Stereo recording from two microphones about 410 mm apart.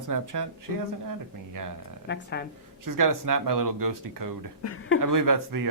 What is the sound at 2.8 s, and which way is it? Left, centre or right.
Speech, right.